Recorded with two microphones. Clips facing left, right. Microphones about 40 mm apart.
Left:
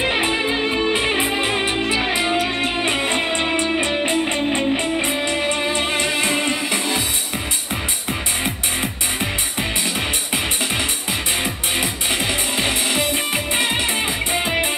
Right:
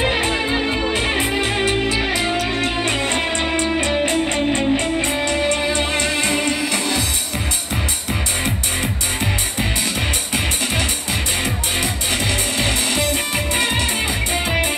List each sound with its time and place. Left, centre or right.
0.1 s music: centre
0.5 s music: centre
0.8 s music: centre
11.4 s music: centre